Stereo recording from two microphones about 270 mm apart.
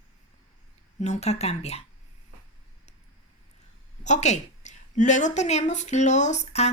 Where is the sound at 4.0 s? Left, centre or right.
Left.